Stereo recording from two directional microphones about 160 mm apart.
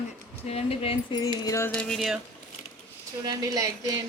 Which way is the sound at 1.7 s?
5° left (ahead or behind).